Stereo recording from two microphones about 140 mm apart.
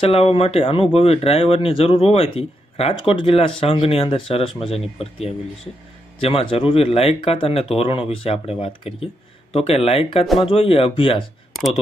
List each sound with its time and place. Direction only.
0.0 s speech: 40° left (ahead or behind)